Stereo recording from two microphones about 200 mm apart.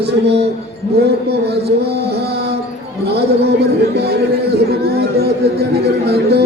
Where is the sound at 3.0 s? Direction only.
55° right (ahead or behind).